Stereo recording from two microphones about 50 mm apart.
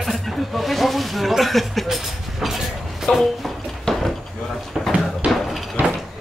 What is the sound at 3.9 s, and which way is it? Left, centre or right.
Drawer open or close, centre.